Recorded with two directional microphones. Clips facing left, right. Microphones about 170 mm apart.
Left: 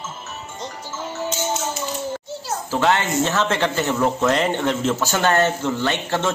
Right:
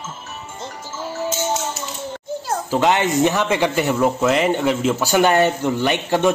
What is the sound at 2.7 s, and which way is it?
Speech, 15° right (ahead or behind).